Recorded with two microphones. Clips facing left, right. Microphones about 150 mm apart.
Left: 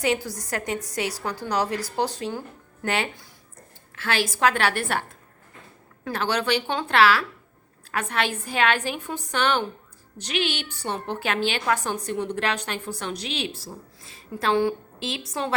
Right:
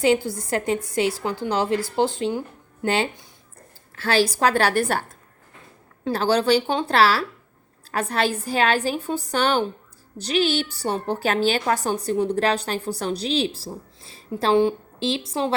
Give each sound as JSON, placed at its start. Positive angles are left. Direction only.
{"t": 0.0, "sound": "a woman's voice", "side_deg": -25}
{"t": 6.1, "sound": "a woman's voice", "side_deg": -30}